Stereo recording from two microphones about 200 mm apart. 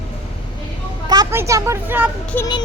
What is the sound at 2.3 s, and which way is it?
Music, 20° left (ahead or behind).